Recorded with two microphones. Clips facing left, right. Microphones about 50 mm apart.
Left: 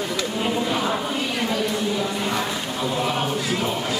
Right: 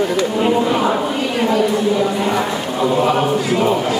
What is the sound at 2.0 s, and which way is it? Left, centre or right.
Chant, right.